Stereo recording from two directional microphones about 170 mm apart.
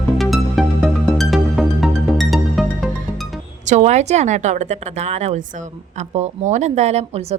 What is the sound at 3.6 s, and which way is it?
A woman's voice, 45° right (ahead or behind).